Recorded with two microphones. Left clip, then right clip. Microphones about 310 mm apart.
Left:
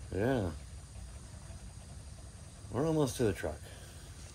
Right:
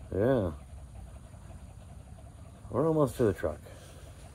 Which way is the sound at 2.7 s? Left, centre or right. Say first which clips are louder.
Right 5 dB; right.